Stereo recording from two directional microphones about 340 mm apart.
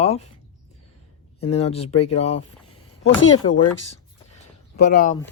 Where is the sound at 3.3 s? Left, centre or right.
Centre.